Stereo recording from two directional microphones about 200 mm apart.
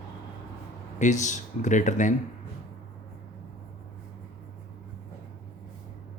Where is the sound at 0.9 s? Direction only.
35° left (ahead or behind).